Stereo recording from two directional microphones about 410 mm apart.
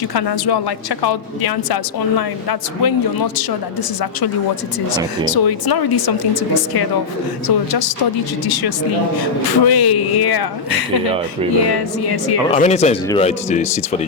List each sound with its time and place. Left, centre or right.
0.1 s speech: left
5.3 s speech: left
12.5 s speech: centre